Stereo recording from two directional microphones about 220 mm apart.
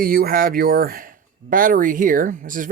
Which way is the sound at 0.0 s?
40° right (ahead or behind).